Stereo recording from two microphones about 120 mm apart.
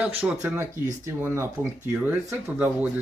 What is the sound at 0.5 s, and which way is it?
Speech, 20° right (ahead or behind).